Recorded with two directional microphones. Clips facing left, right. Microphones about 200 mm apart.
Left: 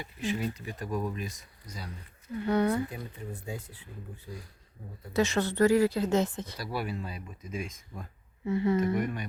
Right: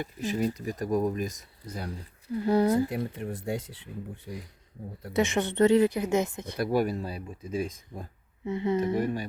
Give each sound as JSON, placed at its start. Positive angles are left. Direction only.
{"t": 0.0, "sound": "speech", "side_deg": -40}
{"t": 2.9, "sound": "speech", "side_deg": -80}
{"t": 5.1, "sound": "speech", "side_deg": -20}
{"t": 6.6, "sound": "speech", "side_deg": -45}
{"t": 8.4, "sound": "a woman's voice", "side_deg": -20}
{"t": 9.0, "sound": "speech", "side_deg": -30}